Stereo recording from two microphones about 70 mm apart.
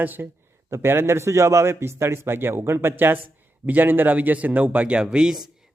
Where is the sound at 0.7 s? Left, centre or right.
Right; by 5.4 s centre.